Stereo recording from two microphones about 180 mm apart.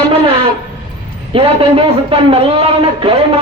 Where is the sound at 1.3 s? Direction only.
30° right (ahead or behind).